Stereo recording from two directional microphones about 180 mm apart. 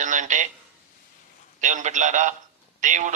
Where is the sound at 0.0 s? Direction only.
45° right (ahead or behind).